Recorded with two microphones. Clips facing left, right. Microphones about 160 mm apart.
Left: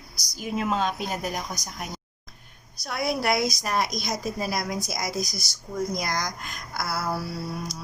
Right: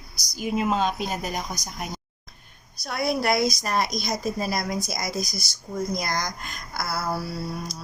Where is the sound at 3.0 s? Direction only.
10° left (ahead or behind).